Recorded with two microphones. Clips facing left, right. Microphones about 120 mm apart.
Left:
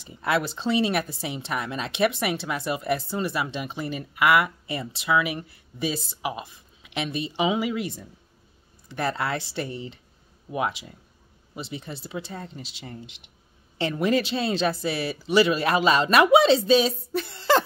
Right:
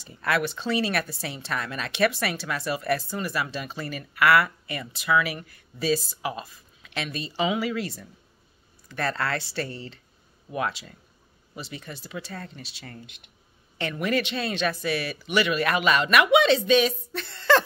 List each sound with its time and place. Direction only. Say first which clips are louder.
0.0 s speech: left 1 dB; 20° left (ahead or behind)